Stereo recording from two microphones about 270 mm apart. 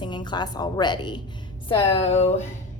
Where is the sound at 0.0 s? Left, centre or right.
Centre.